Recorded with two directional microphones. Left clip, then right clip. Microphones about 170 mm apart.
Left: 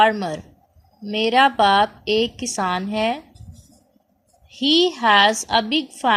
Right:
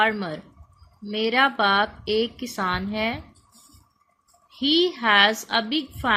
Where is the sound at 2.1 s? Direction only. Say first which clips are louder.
Left 4 dB; 65° left (ahead or behind).